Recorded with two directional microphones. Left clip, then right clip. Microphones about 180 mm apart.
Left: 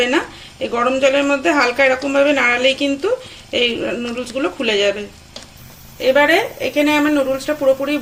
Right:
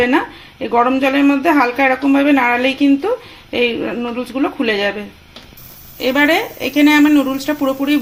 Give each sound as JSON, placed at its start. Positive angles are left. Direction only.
{"t": 0.6, "sound": "speech", "side_deg": -50}
{"t": 6.0, "sound": "speech", "side_deg": -55}